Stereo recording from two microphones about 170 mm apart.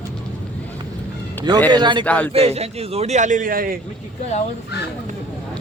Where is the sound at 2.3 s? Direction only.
35° right (ahead or behind); by 3.7 s 55° right (ahead or behind).